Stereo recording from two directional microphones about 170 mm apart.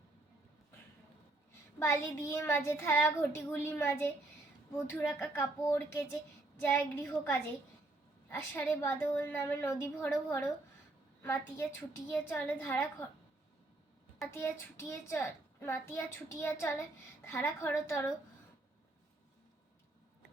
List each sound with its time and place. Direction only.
1.8 s a child's voice: 15° left (ahead or behind)
8.3 s a child's voice: 10° left (ahead or behind)
14.3 s a child's voice: 15° left (ahead or behind)